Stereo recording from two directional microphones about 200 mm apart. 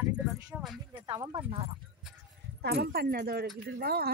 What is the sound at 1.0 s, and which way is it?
Speech, 20° right (ahead or behind).